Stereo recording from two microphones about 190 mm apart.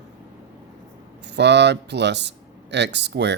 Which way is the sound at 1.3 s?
65° right (ahead or behind).